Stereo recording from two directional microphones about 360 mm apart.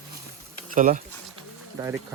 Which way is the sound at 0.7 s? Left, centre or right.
Right.